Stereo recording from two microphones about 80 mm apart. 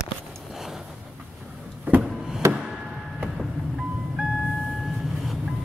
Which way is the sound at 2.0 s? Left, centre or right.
Centre.